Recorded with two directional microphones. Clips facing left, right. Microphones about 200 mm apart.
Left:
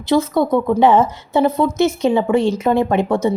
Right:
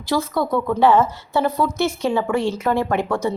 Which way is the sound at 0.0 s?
20° left (ahead or behind).